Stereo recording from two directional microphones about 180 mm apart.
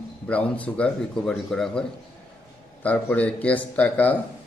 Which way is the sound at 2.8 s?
10° left (ahead or behind).